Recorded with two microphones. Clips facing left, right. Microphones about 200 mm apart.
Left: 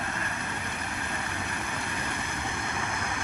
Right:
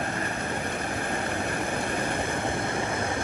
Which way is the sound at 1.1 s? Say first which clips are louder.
Right 6 dB; 55° right (ahead or behind).